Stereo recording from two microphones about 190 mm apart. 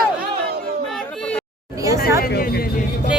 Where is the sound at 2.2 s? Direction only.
50° left (ahead or behind).